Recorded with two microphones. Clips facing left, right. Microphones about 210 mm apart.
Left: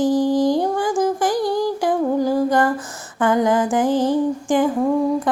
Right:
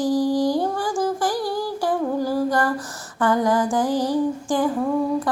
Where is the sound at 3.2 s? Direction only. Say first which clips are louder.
Left 2 dB; 20° left (ahead or behind).